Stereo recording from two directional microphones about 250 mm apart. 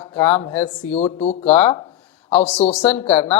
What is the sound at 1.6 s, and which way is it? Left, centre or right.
Speech, centre.